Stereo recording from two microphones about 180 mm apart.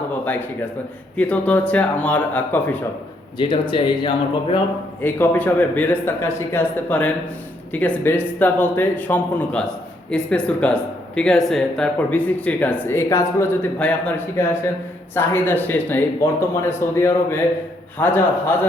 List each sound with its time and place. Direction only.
0.3 s speech: 10° left (ahead or behind)
3.3 s speech: 25° left (ahead or behind)
5.0 s speech: 10° left (ahead or behind)